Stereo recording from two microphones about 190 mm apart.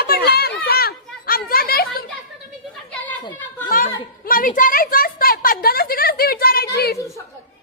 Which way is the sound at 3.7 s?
50° left (ahead or behind).